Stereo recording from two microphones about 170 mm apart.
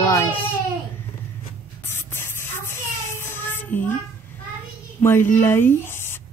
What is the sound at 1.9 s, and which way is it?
Music, 15° left (ahead or behind).